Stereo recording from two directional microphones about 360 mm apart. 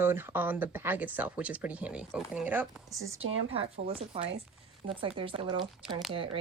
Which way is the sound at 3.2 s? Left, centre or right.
Right.